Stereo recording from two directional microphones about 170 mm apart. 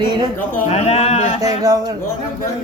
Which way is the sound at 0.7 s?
40° left (ahead or behind).